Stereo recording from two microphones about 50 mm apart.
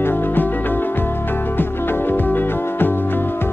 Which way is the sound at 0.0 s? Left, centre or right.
Left.